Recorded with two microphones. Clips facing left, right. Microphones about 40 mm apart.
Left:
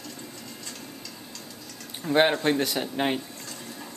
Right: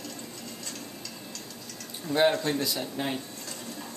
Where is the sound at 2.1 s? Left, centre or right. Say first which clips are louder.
Left 3 dB; left.